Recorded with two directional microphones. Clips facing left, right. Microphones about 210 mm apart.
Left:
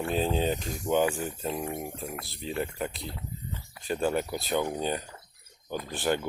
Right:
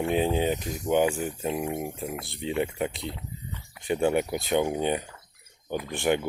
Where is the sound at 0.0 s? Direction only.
15° right (ahead or behind).